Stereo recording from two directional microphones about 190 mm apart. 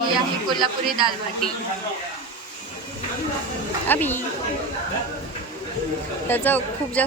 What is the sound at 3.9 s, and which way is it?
Speech, 10° left (ahead or behind).